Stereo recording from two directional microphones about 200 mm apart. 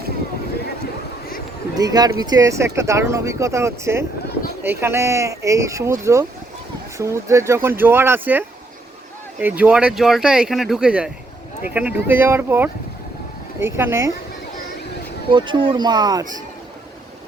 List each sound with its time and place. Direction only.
1.7 s speech: 20° right (ahead or behind)
15.3 s speech: 25° right (ahead or behind)